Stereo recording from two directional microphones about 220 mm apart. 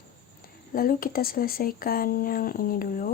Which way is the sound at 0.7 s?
40° left (ahead or behind).